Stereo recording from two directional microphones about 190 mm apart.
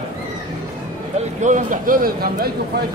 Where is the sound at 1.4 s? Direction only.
40° right (ahead or behind).